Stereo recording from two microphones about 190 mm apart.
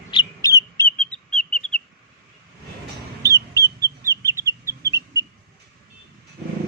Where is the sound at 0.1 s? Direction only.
20° left (ahead or behind).